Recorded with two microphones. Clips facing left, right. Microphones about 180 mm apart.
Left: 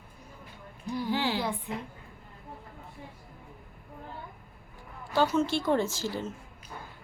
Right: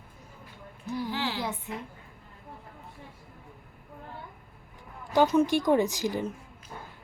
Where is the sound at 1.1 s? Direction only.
15° left (ahead or behind).